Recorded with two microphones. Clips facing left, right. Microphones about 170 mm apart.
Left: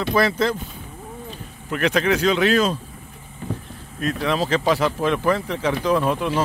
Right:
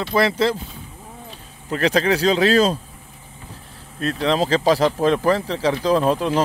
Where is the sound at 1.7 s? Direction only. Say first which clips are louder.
Right 1 dB; 35° right (ahead or behind).